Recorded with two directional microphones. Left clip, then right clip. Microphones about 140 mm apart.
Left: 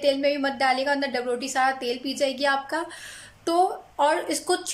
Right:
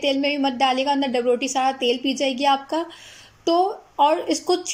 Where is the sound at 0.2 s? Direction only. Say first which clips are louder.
Right 2 dB; 10° right (ahead or behind).